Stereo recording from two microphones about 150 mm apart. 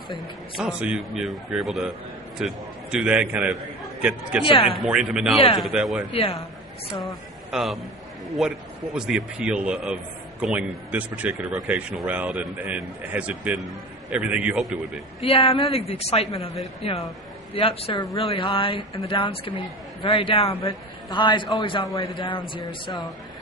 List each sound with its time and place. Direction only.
0.1 s a man's voice: 5° right (ahead or behind)
4.5 s speech: 40° left (ahead or behind)
4.8 s a man's voice: 5° right (ahead or behind)
6.1 s speech: 40° left (ahead or behind)
7.0 s a man's voice: centre (ahead or behind)
15.2 s speech: 40° left (ahead or behind)